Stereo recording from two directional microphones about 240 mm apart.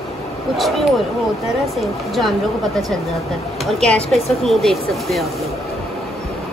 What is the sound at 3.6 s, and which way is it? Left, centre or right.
Speech, centre.